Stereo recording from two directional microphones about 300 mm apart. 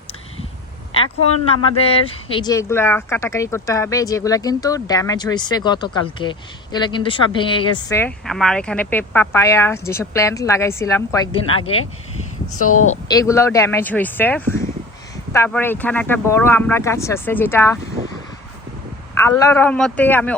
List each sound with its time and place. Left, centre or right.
0.9 s speech: centre
12.5 s a woman's voice: left
12.9 s speech: centre
19.2 s speech: centre